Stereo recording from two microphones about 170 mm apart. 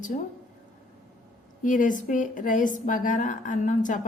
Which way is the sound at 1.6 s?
50° left (ahead or behind).